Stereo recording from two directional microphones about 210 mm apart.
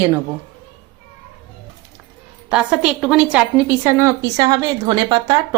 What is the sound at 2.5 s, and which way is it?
A woman's voice, 5° right (ahead or behind).